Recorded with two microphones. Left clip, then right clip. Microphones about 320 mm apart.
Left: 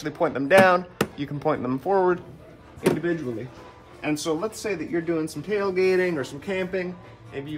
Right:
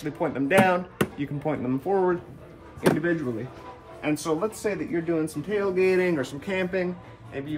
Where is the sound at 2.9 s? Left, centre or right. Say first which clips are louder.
Even; centre.